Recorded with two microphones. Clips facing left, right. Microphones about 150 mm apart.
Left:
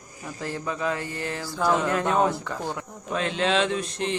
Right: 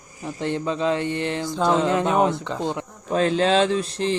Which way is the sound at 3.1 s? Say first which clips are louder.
Right 6 dB; 35° right (ahead or behind).